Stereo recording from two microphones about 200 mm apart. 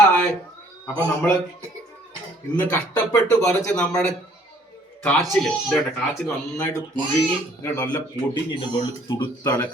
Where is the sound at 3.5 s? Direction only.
5° left (ahead or behind).